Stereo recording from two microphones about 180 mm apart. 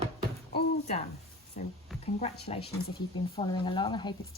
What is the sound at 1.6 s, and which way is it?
Speech, 45° left (ahead or behind).